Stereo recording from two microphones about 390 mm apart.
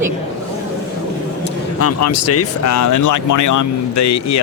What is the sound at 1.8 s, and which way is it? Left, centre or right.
Speech, left.